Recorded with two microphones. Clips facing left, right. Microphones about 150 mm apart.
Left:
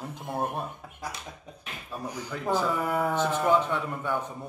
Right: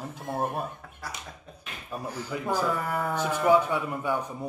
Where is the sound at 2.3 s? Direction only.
10° right (ahead or behind).